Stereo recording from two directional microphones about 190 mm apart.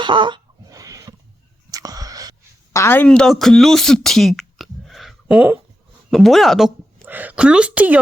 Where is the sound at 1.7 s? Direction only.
20° right (ahead or behind).